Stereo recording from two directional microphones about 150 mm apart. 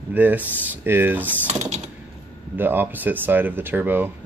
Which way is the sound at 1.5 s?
50° right (ahead or behind).